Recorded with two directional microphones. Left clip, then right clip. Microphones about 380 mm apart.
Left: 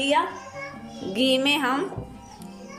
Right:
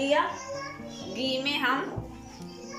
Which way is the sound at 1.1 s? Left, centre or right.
Centre.